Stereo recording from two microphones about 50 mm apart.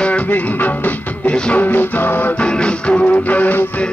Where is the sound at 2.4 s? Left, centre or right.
Left.